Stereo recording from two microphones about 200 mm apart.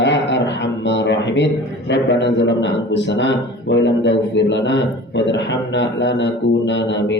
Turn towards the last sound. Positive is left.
turn(degrees=65)  # may be behind; listen again after turning